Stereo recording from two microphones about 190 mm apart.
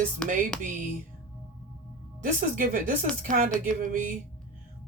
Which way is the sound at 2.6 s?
45° right (ahead or behind).